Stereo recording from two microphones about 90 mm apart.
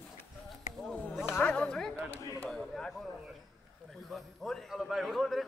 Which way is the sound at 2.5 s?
5° left (ahead or behind).